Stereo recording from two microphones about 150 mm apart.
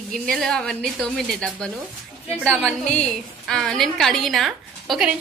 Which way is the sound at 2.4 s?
10° right (ahead or behind).